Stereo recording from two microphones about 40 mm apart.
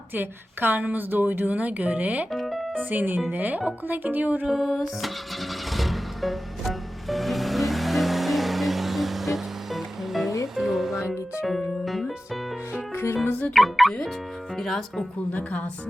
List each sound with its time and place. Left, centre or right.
0.1 s a woman's voice: right
2.3 s music: centre
2.7 s speech: right
4.4 s music: centre
13.2 s music: left
13.5 s music: centre
15.3 s speech: left